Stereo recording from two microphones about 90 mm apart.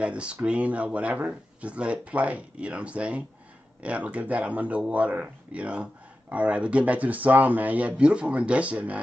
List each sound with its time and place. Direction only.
0.0 s speech: 10° right (ahead or behind)